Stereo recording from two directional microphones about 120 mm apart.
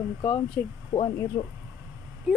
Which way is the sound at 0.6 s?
15° left (ahead or behind).